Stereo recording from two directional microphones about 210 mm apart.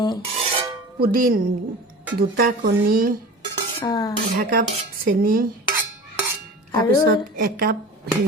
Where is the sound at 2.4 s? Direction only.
45° right (ahead or behind).